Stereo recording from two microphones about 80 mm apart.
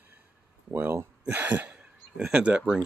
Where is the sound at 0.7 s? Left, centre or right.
Right.